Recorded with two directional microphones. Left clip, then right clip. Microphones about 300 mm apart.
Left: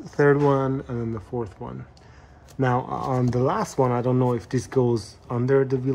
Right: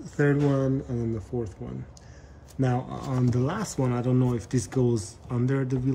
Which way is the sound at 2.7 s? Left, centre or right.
Centre.